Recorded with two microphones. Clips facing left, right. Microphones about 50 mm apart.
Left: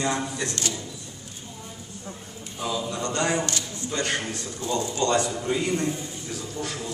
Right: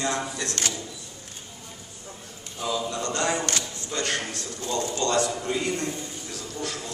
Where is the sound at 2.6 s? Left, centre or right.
Centre.